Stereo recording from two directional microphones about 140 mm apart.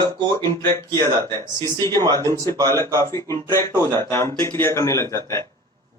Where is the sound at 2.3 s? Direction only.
20° left (ahead or behind).